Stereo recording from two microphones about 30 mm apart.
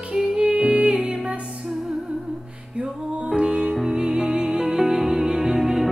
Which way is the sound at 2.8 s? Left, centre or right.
Right.